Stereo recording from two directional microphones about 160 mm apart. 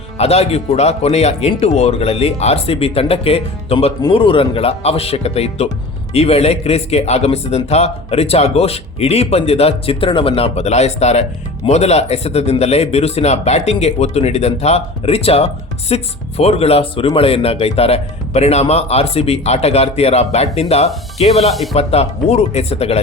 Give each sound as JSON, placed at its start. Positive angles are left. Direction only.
{"t": 0.2, "sound": "speech", "side_deg": 40}
{"t": 21.5, "sound": "speech", "side_deg": 0}
{"t": 21.8, "sound": "speech", "side_deg": 40}